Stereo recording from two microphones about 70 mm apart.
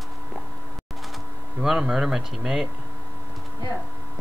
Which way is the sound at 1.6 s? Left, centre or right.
Centre.